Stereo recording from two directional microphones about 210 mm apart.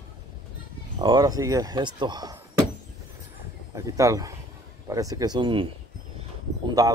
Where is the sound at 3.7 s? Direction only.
15° right (ahead or behind).